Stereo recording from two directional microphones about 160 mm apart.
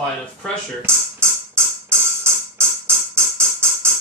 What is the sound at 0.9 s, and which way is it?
Speech, 15° right (ahead or behind).